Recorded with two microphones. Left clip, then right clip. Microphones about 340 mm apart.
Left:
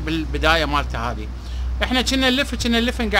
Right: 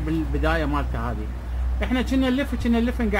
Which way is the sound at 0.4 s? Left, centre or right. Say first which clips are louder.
Left 8 dB; left.